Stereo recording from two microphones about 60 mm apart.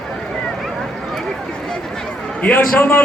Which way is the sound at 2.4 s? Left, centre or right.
Left.